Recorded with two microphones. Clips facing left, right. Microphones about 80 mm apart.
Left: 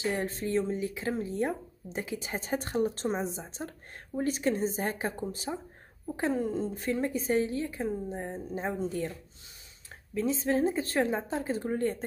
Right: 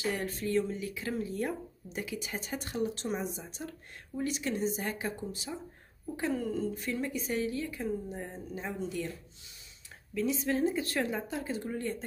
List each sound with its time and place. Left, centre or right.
0.0 s speech: left
6.1 s speech: left
10.1 s speech: left